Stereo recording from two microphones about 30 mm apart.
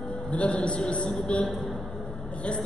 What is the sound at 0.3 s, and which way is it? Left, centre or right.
A man's voice, left.